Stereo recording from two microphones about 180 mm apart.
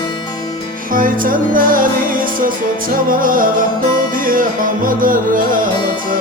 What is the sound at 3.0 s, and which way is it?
Music, 50° right (ahead or behind).